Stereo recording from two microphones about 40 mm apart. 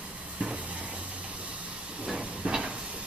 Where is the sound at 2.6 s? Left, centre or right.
Right.